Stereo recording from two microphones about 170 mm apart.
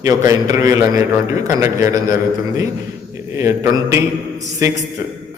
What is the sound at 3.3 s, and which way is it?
Speech, 20° right (ahead or behind).